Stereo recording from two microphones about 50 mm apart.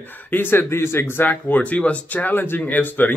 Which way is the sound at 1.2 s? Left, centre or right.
Left.